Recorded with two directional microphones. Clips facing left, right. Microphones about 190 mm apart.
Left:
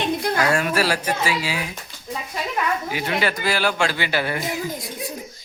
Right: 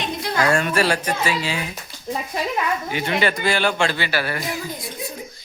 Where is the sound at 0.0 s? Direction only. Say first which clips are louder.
Left 4 dB; 55° left (ahead or behind).